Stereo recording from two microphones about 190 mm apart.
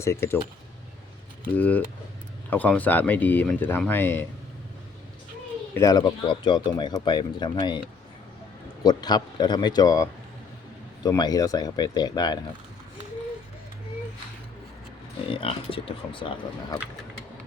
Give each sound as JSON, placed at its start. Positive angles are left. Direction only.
{"t": 0.0, "sound": "speech", "side_deg": 15}
{"t": 1.5, "sound": "speech", "side_deg": 10}
{"t": 5.7, "sound": "speech", "side_deg": 20}
{"t": 8.8, "sound": "speech", "side_deg": 20}
{"t": 15.3, "sound": "speech", "side_deg": 30}